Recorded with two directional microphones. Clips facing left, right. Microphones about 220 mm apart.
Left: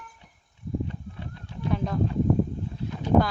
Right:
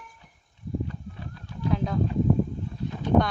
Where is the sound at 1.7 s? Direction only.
Centre (ahead or behind).